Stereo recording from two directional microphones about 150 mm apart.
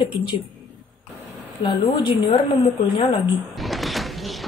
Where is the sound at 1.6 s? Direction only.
35° left (ahead or behind).